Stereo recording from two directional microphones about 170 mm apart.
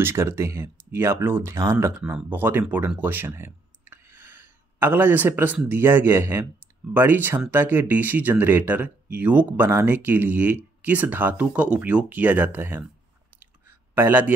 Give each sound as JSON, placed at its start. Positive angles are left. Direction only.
{"t": 0.0, "sound": "speech", "side_deg": -15}
{"t": 13.9, "sound": "speech", "side_deg": -10}